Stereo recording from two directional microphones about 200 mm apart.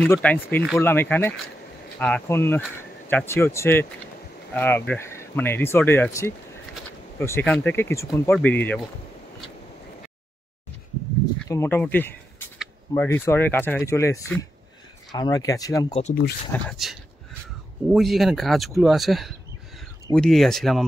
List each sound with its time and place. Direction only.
0.0 s speech: 5° left (ahead or behind)
11.4 s speech: 15° left (ahead or behind)
15.9 s speech: 35° left (ahead or behind)
16.5 s speech: 5° left (ahead or behind)